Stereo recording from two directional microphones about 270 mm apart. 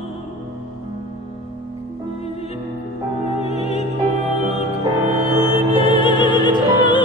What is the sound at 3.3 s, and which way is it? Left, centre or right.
Music, left.